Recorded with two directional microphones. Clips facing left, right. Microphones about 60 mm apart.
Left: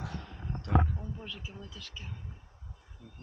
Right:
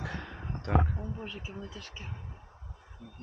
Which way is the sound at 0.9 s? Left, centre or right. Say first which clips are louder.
Right 3 dB; right.